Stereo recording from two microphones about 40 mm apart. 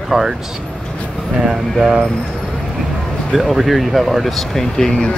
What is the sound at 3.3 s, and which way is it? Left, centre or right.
A man's voice, centre.